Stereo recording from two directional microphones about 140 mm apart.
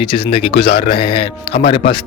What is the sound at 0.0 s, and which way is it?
Speech, 40° left (ahead or behind).